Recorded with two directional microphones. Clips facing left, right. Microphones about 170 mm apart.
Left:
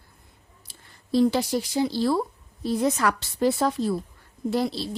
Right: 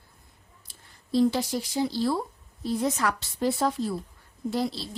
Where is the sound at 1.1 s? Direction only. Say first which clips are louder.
Left 2 dB; 70° left (ahead or behind).